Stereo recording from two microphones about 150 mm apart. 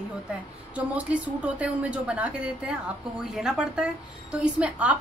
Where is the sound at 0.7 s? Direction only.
10° right (ahead or behind).